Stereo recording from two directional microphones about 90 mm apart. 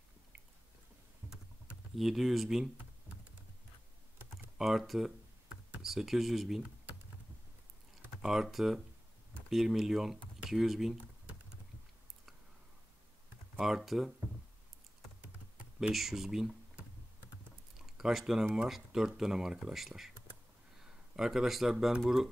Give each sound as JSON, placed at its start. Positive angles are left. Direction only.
{"t": 1.2, "sound": "computer keyboard", "side_deg": -25}
{"t": 2.0, "sound": "speech", "side_deg": -5}
{"t": 4.6, "sound": "speech", "side_deg": 0}
{"t": 8.2, "sound": "speech", "side_deg": -5}
{"t": 13.6, "sound": "speech", "side_deg": -5}
{"t": 15.9, "sound": "speech", "side_deg": 0}
{"t": 17.7, "sound": "a sound", "side_deg": -5}
{"t": 18.5, "sound": "speech", "side_deg": -5}